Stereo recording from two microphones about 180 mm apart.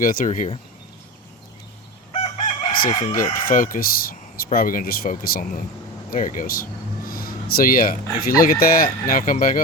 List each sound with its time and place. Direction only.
0.0 s speech: 50° left (ahead or behind)
2.1 s chicken: 35° left (ahead or behind)
3.3 s speech: 50° left (ahead or behind)